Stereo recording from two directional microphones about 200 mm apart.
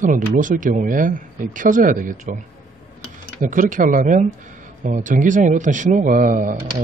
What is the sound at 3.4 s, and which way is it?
Speech, 40° right (ahead or behind).